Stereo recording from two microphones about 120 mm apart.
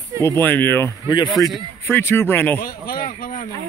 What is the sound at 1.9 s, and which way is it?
Speech, 20° left (ahead or behind).